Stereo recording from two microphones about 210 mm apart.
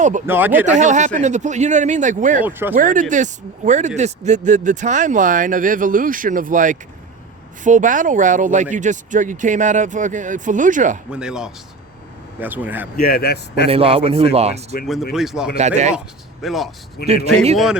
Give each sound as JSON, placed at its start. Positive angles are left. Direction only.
{"t": 0.3, "sound": "speech", "side_deg": -10}
{"t": 0.8, "sound": "speech", "side_deg": -35}
{"t": 2.4, "sound": "speech", "side_deg": -10}
{"t": 2.7, "sound": "speech", "side_deg": -40}
{"t": 11.1, "sound": "speech", "side_deg": -5}
{"t": 13.0, "sound": "a man's voice", "side_deg": 45}
{"t": 13.7, "sound": "a man's voice", "side_deg": -25}
{"t": 15.1, "sound": "speech", "side_deg": 0}
{"t": 15.5, "sound": "speech", "side_deg": -35}
{"t": 16.4, "sound": "speech", "side_deg": 0}
{"t": 17.0, "sound": "a man's voice", "side_deg": 50}